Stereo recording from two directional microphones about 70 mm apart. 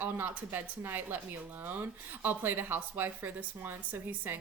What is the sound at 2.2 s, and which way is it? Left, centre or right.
Speech, right.